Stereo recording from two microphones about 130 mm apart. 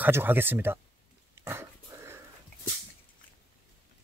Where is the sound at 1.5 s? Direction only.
20° right (ahead or behind).